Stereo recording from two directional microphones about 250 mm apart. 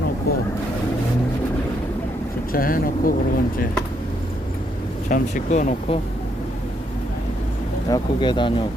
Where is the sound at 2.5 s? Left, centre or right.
Left.